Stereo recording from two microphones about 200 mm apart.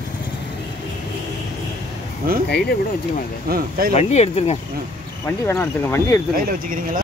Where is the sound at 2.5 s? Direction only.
55° left (ahead or behind).